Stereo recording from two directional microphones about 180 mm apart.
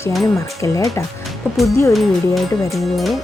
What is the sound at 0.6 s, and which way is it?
Speech, 15° left (ahead or behind).